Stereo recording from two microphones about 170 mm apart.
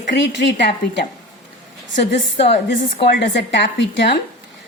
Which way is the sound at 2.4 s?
35° left (ahead or behind).